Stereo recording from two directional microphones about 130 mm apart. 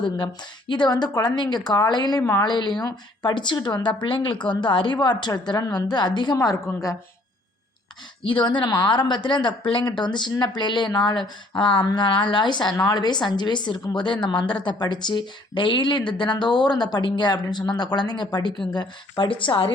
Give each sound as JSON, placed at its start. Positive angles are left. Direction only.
{"t": 0.7, "sound": "a woman's voice", "side_deg": 35}
{"t": 8.2, "sound": "a woman's voice", "side_deg": 40}